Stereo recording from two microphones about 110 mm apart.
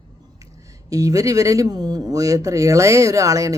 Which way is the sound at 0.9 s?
30° right (ahead or behind).